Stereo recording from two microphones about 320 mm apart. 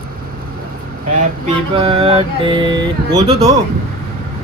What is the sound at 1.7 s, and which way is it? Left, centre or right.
Music, centre.